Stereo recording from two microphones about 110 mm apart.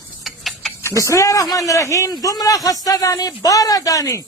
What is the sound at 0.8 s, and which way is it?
A man's voice, 25° left (ahead or behind).